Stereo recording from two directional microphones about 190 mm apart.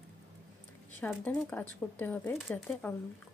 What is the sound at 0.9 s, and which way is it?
Speech, 10° left (ahead or behind).